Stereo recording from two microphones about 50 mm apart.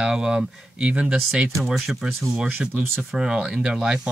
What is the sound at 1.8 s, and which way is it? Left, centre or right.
Speech, centre.